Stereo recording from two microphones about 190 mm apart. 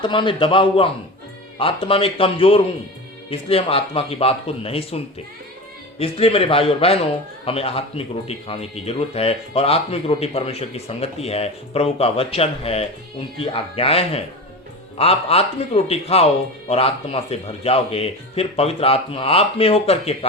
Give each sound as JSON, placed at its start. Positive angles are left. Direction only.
{"t": 0.0, "sound": "a man's voice", "side_deg": 25}